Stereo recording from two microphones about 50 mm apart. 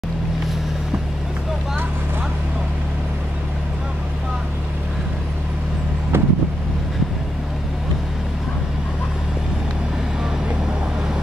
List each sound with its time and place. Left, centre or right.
6.1 s vehicle: right